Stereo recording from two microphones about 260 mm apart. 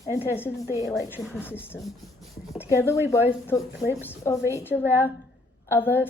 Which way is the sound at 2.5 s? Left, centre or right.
Centre.